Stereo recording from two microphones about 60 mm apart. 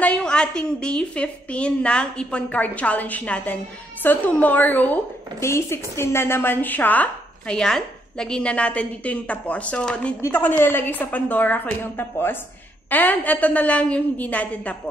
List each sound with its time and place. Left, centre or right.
0.2 s a woman's voice: centre
5.4 s a woman's voice: left
7.5 s a woman's voice: centre
10.3 s a woman's voice: left
12.9 s a woman's voice: left